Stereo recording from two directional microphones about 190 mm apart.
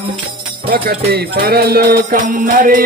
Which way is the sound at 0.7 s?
55° right (ahead or behind).